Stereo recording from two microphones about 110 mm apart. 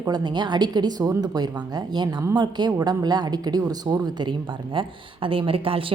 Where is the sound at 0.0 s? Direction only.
40° right (ahead or behind).